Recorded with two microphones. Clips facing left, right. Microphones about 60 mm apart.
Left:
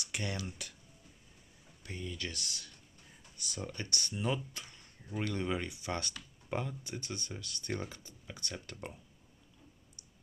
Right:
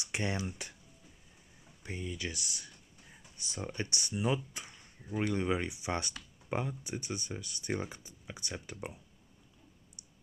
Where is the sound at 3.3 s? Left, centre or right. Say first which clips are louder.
Right 3 dB; right.